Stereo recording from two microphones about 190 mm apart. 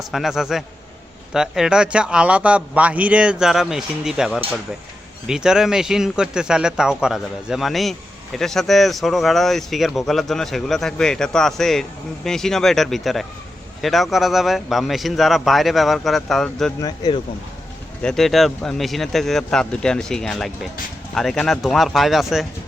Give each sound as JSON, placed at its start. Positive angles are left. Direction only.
{"t": 0.0, "sound": "speech", "side_deg": 0}
{"t": 16.8, "sound": "speech", "side_deg": 20}
{"t": 18.0, "sound": "speech", "side_deg": 0}